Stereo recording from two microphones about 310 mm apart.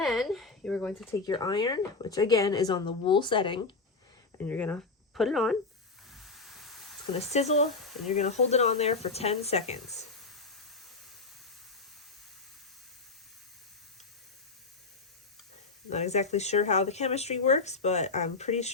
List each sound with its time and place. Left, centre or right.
0.0 s a sound: centre
1.3 s speech: centre
4.4 s speech: centre
6.1 s a sound: centre
7.1 s speech: left
9.8 s spray: centre
15.9 s speech: left